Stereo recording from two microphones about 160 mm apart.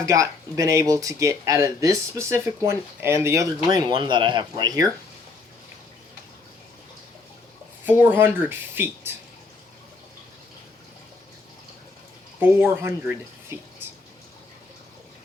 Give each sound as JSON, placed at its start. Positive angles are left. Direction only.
{"t": 0.0, "sound": "speech", "side_deg": -20}
{"t": 7.9, "sound": "speech", "side_deg": -10}
{"t": 12.4, "sound": "speech", "side_deg": -15}